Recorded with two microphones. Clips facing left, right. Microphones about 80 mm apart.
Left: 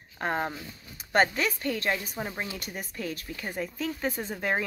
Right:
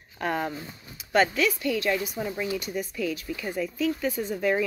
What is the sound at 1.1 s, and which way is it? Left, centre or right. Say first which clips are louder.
Speech: right 2 dB; left.